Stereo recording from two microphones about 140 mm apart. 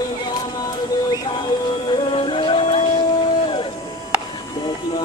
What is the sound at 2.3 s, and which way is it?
Music, 40° left (ahead or behind).